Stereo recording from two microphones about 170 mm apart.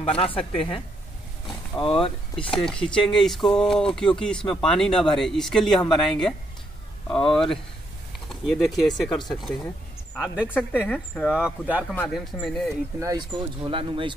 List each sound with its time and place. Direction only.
0.0 s speech: 35° left (ahead or behind)
1.8 s speech: 30° left (ahead or behind)
2.6 s speech: 5° left (ahead or behind)
8.3 s speech: centre (ahead or behind)
10.5 s speech: 10° left (ahead or behind); by 11.8 s 10° right (ahead or behind)
11.9 s speech: 5° left (ahead or behind)
13.0 s speech: 25° right (ahead or behind)